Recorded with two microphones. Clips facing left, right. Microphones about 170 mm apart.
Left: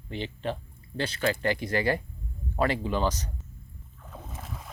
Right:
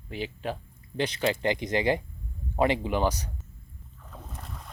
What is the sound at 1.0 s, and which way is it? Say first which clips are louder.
Speech: right 1 dB; 20° right (ahead or behind).